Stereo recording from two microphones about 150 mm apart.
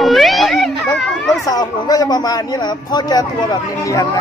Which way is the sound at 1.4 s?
25° left (ahead or behind).